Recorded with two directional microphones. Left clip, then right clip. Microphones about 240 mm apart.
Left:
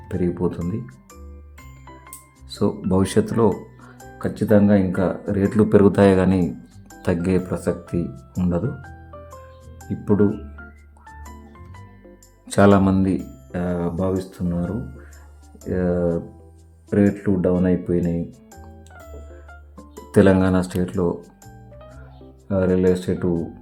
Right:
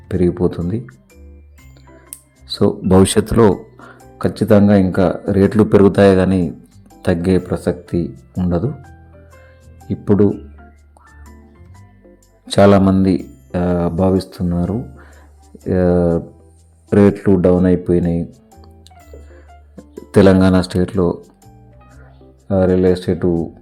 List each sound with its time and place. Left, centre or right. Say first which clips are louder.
0.1 s speech: right 7 dB; right
2.5 s speech: right 8 dB; right
3.8 s music: right 7 dB; right
4.7 s speech: right 6 dB; right
9.9 s speech: right 5 dB; centre
12.5 s speech: right 5 dB; centre
13.5 s speech: right 7 dB; right
20.1 s speech: right 5 dB; centre
22.4 s speech: right 5 dB; centre